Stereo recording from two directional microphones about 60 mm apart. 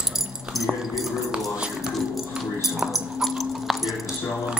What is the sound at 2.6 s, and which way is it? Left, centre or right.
Keys jangling, centre.